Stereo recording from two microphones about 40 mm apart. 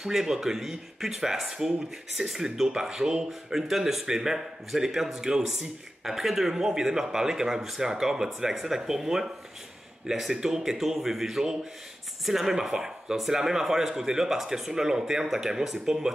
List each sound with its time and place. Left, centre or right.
0.0 s speech: centre